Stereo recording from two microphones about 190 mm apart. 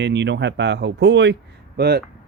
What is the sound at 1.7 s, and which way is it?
Speech, 55° right (ahead or behind).